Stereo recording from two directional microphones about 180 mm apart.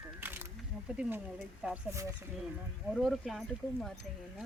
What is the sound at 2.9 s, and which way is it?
Speech, centre (ahead or behind).